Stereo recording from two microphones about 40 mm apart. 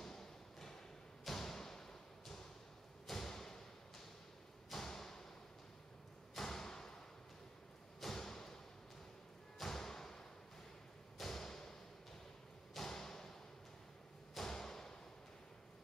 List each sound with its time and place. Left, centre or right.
0.0 s a sound: centre
1.2 s thump: centre
4.6 s thump: centre
6.3 s thump: centre
8.0 s thump: centre
9.6 s thump: centre
12.7 s thump: centre
14.3 s thump: centre